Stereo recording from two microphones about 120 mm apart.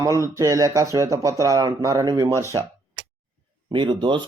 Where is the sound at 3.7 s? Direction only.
40° right (ahead or behind).